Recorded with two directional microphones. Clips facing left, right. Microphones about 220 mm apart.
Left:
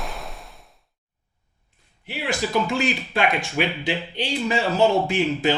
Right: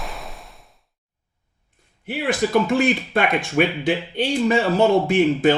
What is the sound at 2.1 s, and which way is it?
Speech, 50° right (ahead or behind).